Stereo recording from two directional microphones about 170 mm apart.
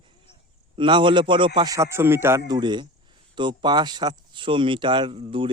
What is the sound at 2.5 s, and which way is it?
Speech, 25° right (ahead or behind).